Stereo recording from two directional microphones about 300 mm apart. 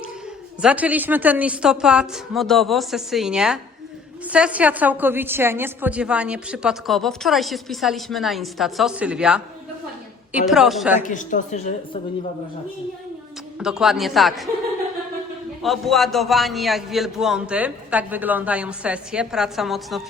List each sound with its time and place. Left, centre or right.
0.6 s a woman's voice: centre
11.0 s a woman's voice: left
13.6 s a woman's voice: centre
15.6 s a woman's voice: centre